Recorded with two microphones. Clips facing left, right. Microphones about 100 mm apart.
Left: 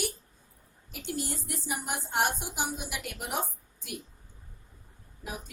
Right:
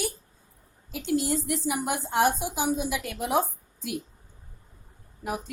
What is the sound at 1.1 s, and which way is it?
Speech, 90° right.